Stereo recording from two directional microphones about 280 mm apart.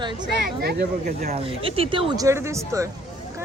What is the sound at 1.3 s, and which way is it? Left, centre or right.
Speech, centre.